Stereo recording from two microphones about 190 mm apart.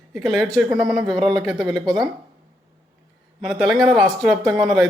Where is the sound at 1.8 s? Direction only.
20° right (ahead or behind).